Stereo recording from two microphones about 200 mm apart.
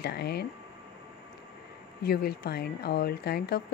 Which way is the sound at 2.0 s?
50° left (ahead or behind).